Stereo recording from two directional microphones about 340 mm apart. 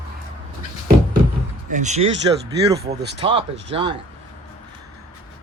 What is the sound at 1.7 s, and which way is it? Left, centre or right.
Speech, right.